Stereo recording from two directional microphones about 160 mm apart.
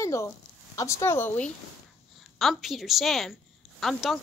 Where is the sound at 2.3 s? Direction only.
Centre (ahead or behind).